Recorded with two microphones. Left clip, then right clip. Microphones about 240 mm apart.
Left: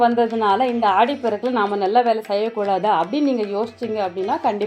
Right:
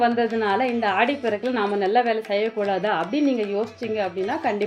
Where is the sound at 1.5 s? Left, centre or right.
Centre.